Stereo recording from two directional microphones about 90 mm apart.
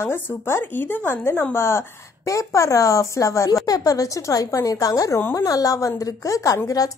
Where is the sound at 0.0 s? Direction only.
25° left (ahead or behind).